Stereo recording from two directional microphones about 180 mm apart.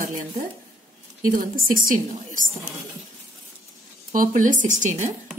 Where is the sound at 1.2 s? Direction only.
50° right (ahead or behind).